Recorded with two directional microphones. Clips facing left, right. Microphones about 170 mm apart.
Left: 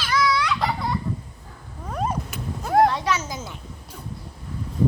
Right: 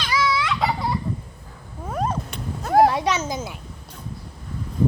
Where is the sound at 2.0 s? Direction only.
5° left (ahead or behind).